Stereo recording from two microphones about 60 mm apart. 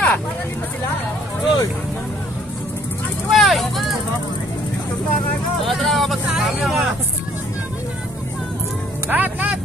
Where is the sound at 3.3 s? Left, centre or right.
Centre.